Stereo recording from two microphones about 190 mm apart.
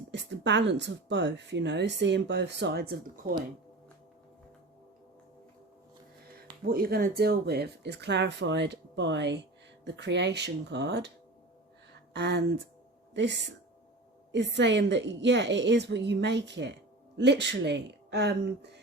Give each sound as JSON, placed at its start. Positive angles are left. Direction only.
{"t": 0.1, "sound": "speech", "side_deg": -65}
{"t": 6.7, "sound": "speech", "side_deg": -50}
{"t": 12.1, "sound": "speech", "side_deg": -65}
{"t": 14.3, "sound": "a woman's voice", "side_deg": -65}